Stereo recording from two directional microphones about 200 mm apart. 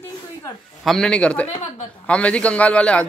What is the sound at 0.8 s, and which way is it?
Speech, centre (ahead or behind).